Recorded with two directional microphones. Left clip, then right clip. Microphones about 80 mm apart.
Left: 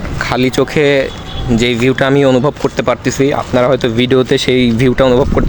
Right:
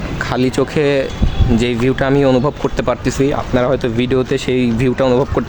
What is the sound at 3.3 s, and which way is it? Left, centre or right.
Speech, left.